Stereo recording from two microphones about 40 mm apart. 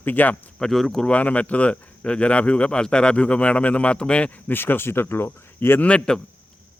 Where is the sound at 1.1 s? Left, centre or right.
Left.